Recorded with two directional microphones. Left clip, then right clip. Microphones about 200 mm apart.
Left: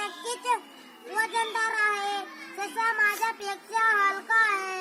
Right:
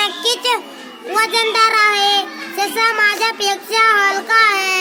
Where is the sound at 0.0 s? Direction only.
25° right (ahead or behind).